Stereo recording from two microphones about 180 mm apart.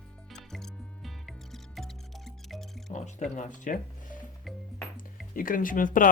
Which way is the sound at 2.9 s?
45° left (ahead or behind).